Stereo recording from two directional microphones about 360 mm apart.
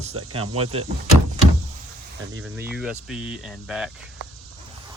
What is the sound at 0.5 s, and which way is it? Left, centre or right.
Speech, centre.